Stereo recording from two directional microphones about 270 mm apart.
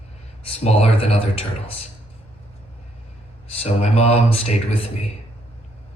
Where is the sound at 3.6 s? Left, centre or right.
Left.